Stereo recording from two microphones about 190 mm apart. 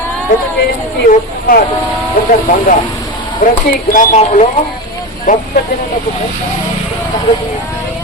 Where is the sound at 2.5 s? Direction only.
45° left (ahead or behind).